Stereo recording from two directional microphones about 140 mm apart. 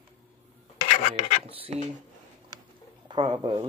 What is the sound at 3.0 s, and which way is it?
Speech, 35° right (ahead or behind).